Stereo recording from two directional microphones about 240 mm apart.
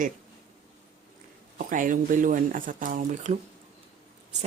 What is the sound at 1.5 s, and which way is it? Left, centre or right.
Speech, right.